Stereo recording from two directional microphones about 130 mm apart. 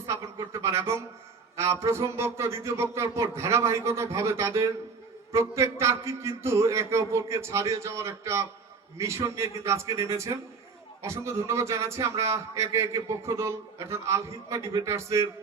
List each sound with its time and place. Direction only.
0.0 s a man's voice: 25° right (ahead or behind)